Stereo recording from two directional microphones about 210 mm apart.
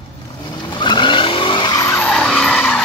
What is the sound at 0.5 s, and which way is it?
Vehicle, 20° left (ahead or behind).